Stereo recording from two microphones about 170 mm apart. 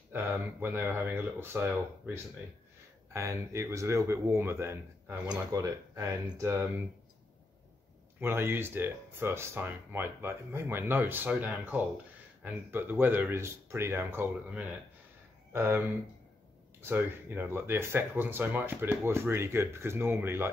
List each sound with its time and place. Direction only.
0.1 s speech: 10° right (ahead or behind)
8.2 s speech: 15° right (ahead or behind)
16.8 s speech: 10° right (ahead or behind)